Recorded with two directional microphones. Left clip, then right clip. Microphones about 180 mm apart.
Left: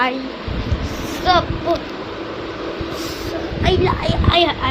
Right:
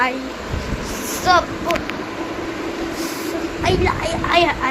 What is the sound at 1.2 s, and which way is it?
Speech, centre (ahead or behind).